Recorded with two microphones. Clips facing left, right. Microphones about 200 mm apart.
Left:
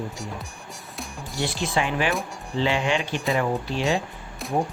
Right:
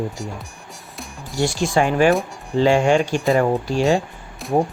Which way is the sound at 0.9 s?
Centre (ahead or behind).